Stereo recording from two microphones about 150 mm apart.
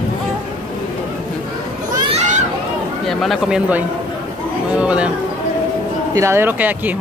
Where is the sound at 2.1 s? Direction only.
55° right (ahead or behind).